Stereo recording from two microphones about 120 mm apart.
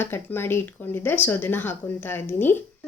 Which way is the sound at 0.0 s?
20° left (ahead or behind).